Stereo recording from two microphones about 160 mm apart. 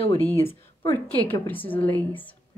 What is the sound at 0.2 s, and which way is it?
Speech, 10° left (ahead or behind).